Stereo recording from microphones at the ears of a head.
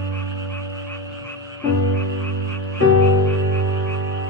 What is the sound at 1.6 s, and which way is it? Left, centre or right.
Frog, left.